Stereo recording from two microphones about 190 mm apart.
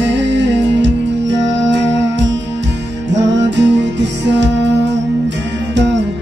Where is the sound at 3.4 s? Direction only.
65° right (ahead or behind).